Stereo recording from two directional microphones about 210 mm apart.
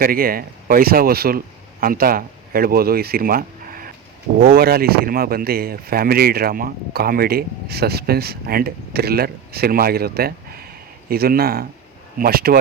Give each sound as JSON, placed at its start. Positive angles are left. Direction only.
{"t": 0.0, "sound": "speech", "side_deg": -45}